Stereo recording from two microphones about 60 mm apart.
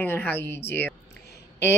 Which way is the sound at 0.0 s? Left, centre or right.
Left.